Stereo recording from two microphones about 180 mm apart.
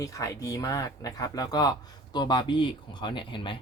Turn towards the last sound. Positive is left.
turn(degrees=25)  # may be behind; listen again after turning